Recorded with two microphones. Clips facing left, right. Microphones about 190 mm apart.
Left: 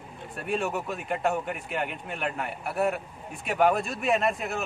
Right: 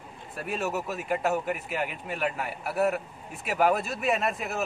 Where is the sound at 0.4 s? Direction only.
Centre (ahead or behind).